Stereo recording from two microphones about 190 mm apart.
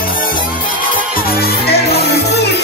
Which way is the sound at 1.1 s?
55° left (ahead or behind).